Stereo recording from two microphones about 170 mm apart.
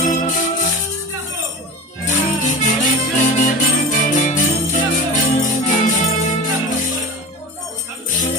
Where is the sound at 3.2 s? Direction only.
50° left (ahead or behind).